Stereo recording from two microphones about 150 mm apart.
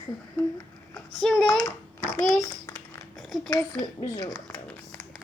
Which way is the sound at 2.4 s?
20° left (ahead or behind).